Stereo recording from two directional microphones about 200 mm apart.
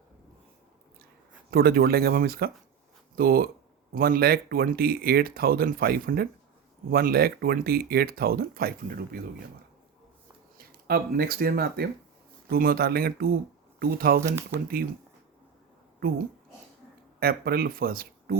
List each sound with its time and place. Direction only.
1.5 s speech: 50° right (ahead or behind)
10.8 s speech: 50° right (ahead or behind)
16.0 s speech: 50° right (ahead or behind)